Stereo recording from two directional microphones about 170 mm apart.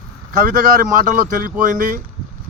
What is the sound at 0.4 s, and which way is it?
Speech, 55° right (ahead or behind).